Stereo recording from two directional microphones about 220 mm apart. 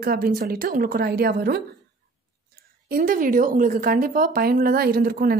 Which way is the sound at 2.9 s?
40° right (ahead or behind).